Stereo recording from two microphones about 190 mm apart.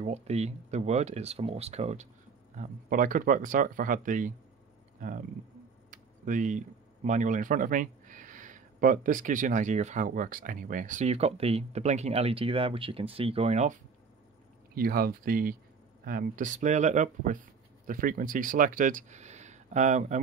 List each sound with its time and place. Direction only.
0.0 s speech: 35° right (ahead or behind)
14.8 s speech: 50° right (ahead or behind)